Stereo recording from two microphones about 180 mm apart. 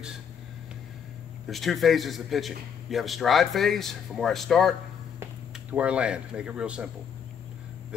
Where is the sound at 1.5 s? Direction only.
Centre (ahead or behind).